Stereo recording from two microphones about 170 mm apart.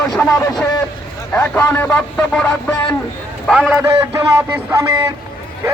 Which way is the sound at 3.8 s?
15° right (ahead or behind).